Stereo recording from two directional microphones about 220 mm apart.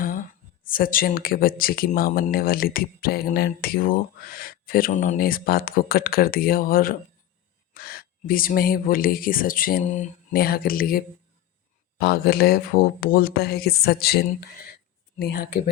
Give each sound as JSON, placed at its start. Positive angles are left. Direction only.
{"t": 0.6, "sound": "speech", "side_deg": 40}